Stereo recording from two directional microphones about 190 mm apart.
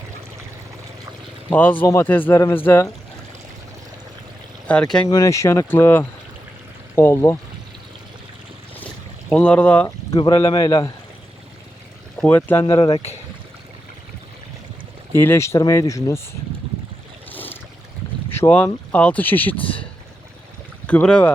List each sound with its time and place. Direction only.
1.5 s speech: 10° left (ahead or behind)
4.7 s speech: 5° left (ahead or behind)
5.0 s speech: 20° left (ahead or behind)
9.3 s speech: 5° left (ahead or behind)
12.1 s speech: 5° left (ahead or behind)
12.6 s speech: 25° left (ahead or behind)
15.1 s speech: 10° left (ahead or behind)
17.3 s a sound: 10° left (ahead or behind)
18.3 s speech: 10° left (ahead or behind)
19.5 s speech: 30° left (ahead or behind)
20.8 s speech: 5° left (ahead or behind)